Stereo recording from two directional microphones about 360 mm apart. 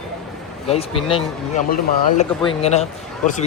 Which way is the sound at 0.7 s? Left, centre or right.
Centre.